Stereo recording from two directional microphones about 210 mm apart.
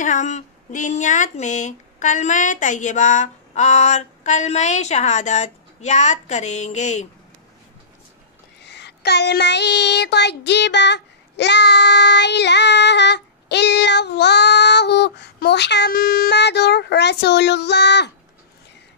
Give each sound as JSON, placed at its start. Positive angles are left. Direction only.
{"t": 0.0, "sound": "speech", "side_deg": 35}
{"t": 8.6, "sound": "speech", "side_deg": 55}